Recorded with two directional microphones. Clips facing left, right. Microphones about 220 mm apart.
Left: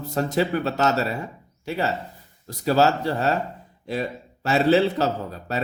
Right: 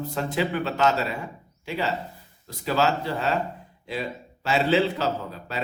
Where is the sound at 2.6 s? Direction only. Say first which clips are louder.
Left 4 dB; 40° left (ahead or behind).